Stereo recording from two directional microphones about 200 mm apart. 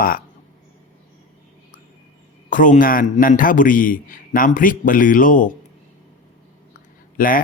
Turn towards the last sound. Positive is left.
turn(degrees=45)  # may be behind; listen again after turning